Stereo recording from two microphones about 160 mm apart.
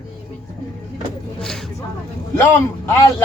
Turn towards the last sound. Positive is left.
turn(degrees=15)  # may be behind; listen again after turning